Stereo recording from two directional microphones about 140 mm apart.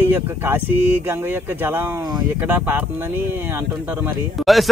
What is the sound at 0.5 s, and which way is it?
Speech, 15° right (ahead or behind).